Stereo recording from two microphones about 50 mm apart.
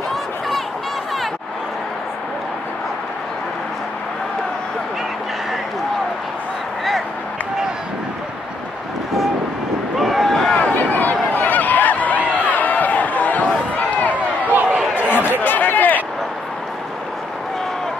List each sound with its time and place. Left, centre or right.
9.9 s boat: centre
10.8 s a sound: left
13.7 s run: left
14.1 s run: right
15.0 s chatter: left